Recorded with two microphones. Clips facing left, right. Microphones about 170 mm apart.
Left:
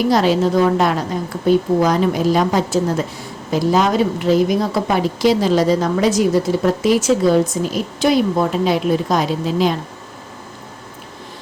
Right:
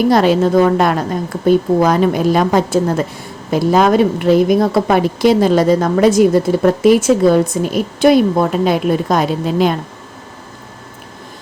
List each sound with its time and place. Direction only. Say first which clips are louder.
0.1 s a woman's voice: right 3 dB; 55° right (ahead or behind)